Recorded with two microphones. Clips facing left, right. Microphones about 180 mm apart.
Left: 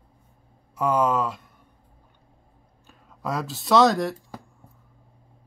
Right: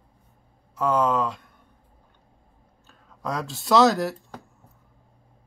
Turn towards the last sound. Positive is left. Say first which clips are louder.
# left 1 dB
turn(degrees=0)  # may be behind; listen again after turning